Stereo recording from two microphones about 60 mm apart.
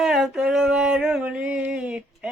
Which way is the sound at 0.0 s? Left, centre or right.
Centre.